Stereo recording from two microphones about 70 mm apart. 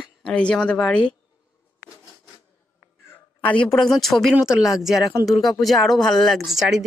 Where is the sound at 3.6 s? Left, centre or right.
Centre.